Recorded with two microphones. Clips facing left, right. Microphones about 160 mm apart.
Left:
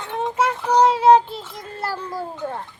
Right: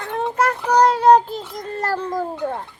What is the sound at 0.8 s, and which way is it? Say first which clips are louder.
Child singing: even; 5° left (ahead or behind).